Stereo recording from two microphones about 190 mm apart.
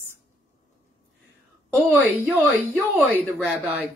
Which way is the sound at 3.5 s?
5° right (ahead or behind).